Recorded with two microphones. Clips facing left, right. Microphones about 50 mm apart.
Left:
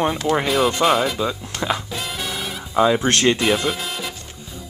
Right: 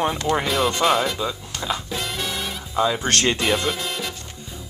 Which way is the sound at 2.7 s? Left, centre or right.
Centre.